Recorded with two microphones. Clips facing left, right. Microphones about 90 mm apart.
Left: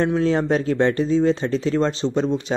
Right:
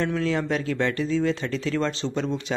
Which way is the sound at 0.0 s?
30° left (ahead or behind).